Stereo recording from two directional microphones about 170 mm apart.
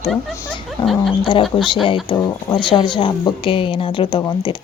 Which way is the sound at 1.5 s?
30° left (ahead or behind).